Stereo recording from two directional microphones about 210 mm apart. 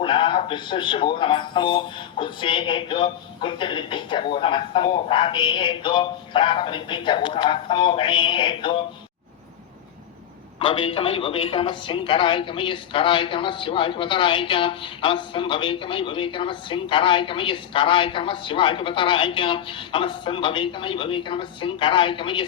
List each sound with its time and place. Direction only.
0.0 s a man's voice: 25° left (ahead or behind)
10.6 s a man's voice: 25° left (ahead or behind)